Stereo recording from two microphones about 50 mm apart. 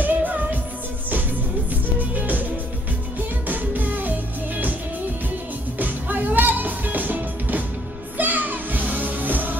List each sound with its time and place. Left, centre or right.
0.0 s music: right
1.7 s music: right
5.8 s music: right